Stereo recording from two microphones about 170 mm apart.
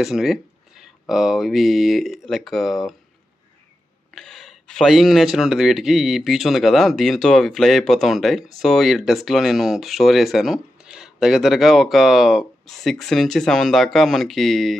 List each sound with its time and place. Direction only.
0.0 s speech: centre (ahead or behind)
4.1 s speech: centre (ahead or behind)